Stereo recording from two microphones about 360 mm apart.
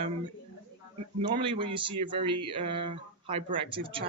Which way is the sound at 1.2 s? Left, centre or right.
Centre.